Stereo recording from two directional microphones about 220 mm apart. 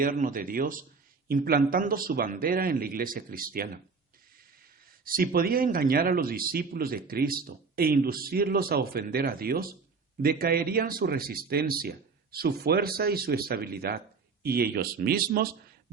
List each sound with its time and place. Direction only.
0.0 s a man's voice: 40° right (ahead or behind)
4.9 s a man's voice: 40° right (ahead or behind)